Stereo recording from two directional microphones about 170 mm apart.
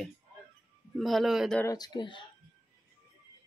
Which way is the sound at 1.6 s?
20° left (ahead or behind).